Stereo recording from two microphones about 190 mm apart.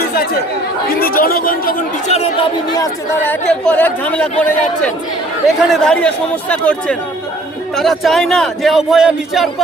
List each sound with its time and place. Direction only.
0.9 s speech: 50° left (ahead or behind)
2.1 s chatter: 35° left (ahead or behind)
2.7 s speech: 20° left (ahead or behind)
3.6 s speech: 10° left (ahead or behind)